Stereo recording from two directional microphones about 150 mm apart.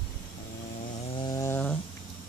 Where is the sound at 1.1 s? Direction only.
30° left (ahead or behind).